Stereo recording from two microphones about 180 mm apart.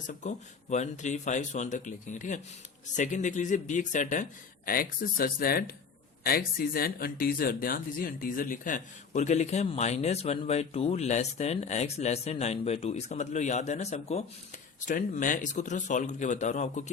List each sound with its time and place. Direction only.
0.1 s a man's voice: 40° left (ahead or behind)